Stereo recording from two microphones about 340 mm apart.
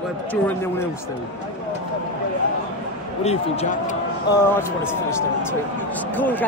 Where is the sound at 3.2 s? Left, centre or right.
Centre.